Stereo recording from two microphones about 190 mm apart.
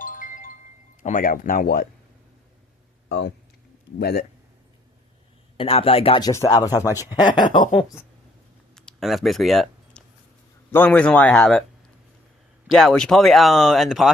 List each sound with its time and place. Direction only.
0.0 s wind chime: 45° left (ahead or behind)
1.0 s speech: 45° left (ahead or behind)
3.1 s speech: 60° left (ahead or behind)
5.5 s speech: 30° left (ahead or behind)
8.7 s a sound: centre (ahead or behind)
10.7 s speech: 10° left (ahead or behind)
12.7 s speech: 5° left (ahead or behind)